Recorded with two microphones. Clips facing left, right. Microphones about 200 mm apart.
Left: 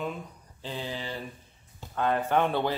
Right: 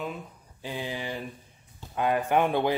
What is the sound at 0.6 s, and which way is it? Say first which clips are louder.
Speech: right 2 dB; 15° right (ahead or behind).